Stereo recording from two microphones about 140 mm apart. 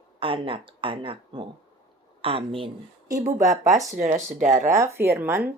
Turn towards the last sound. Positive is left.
turn(degrees=-15)  # may be behind; listen again after turning